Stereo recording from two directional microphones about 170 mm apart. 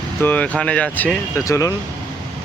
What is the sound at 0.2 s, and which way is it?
Speech, 10° left (ahead or behind).